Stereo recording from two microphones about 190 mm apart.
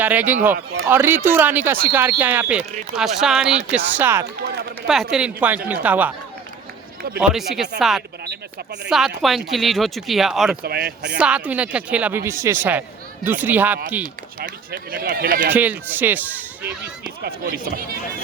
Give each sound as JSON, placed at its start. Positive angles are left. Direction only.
{"t": 0.0, "sound": "speech", "side_deg": -10}
{"t": 7.2, "sound": "speech", "side_deg": 0}
{"t": 10.6, "sound": "speech", "side_deg": -55}
{"t": 11.2, "sound": "speech", "side_deg": -5}
{"t": 14.0, "sound": "speech", "side_deg": -45}
{"t": 15.5, "sound": "speech", "side_deg": -10}
{"t": 17.2, "sound": "speech", "side_deg": -50}